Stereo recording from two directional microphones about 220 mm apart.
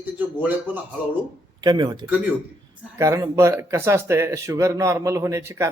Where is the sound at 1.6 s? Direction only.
20° right (ahead or behind).